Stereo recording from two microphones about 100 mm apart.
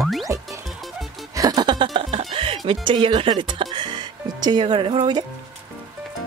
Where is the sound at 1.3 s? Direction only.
40° right (ahead or behind).